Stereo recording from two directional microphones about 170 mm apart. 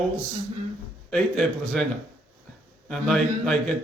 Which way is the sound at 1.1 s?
Centre (ahead or behind).